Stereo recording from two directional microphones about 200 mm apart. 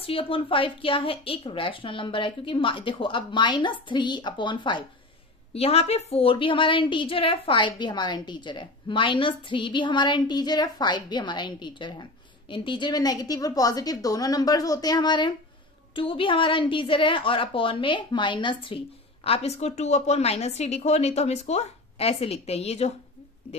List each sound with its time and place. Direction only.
0.0 s a woman's voice: 30° left (ahead or behind)